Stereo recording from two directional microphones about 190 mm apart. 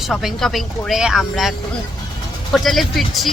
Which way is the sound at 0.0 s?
Centre (ahead or behind).